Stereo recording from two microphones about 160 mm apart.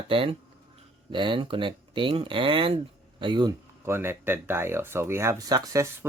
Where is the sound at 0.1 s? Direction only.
35° right (ahead or behind).